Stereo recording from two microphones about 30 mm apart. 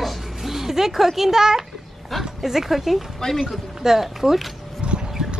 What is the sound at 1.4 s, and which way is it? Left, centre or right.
A child's voice, centre.